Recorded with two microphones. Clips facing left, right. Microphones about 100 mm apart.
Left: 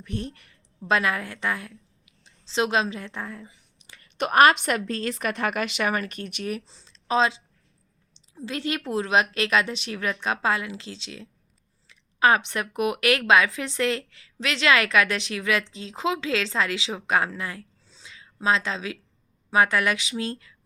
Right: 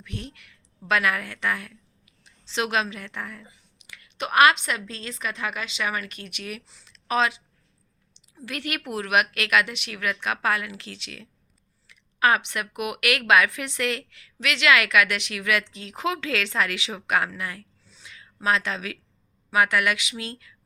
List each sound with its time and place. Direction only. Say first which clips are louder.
0.0 s a woman's voice: left 5 dB; 40° left (ahead or behind)
3.8 s a woman's voice: left 4 dB; 40° left (ahead or behind)